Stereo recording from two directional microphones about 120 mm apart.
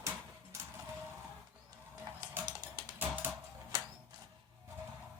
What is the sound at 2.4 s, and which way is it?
Music, 35° right (ahead or behind).